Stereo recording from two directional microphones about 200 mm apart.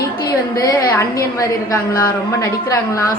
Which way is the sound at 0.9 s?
15° left (ahead or behind).